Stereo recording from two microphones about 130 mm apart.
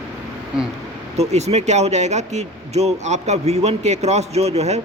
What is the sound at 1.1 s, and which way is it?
Speech, 55° right (ahead or behind).